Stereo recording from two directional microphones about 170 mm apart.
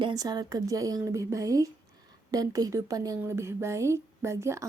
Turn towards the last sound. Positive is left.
turn(degrees=-15)  # may be behind; listen again after turning